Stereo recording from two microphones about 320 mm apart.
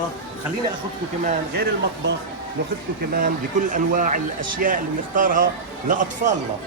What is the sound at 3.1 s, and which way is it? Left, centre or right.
Speech, right.